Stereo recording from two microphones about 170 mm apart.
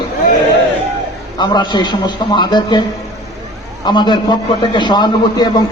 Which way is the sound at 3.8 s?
25° left (ahead or behind).